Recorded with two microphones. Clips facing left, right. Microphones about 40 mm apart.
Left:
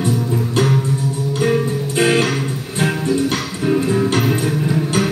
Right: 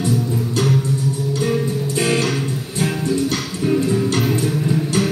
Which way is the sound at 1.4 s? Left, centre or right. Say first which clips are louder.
Left 4 dB; left.